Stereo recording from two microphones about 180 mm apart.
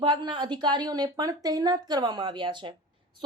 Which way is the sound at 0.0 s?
25° right (ahead or behind).